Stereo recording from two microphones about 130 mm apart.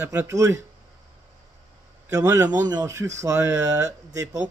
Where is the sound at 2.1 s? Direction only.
25° right (ahead or behind).